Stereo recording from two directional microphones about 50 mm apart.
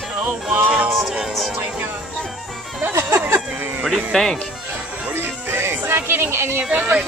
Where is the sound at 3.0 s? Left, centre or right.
Right.